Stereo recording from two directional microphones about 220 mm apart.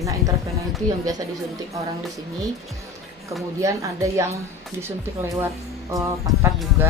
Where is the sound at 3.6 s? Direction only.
15° right (ahead or behind).